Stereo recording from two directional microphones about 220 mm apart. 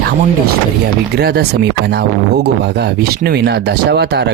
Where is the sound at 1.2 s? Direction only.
45° right (ahead or behind).